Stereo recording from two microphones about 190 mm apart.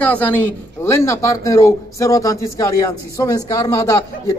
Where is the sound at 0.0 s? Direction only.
10° left (ahead or behind).